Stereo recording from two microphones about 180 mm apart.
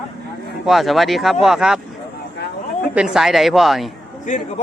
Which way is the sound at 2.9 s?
5° right (ahead or behind).